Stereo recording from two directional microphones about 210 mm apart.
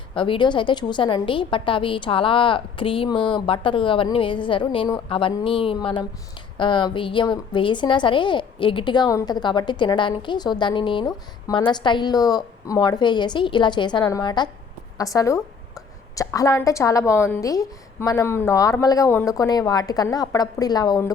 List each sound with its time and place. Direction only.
0.1 s a woman's voice: 25° left (ahead or behind)